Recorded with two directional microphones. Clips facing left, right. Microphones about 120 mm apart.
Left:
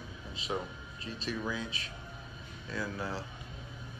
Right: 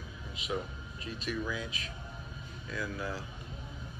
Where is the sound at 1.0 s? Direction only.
30° left (ahead or behind).